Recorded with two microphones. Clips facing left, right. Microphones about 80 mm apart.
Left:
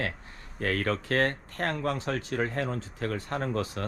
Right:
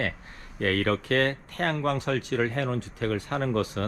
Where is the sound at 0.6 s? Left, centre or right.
Right.